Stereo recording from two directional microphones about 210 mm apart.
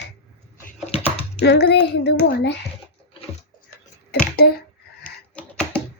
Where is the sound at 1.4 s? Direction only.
50° left (ahead or behind).